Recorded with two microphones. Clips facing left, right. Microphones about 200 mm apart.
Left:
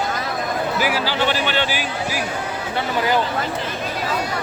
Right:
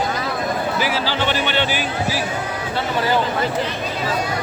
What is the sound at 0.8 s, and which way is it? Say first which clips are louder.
Speech: left 1 dB; 10° left (ahead or behind).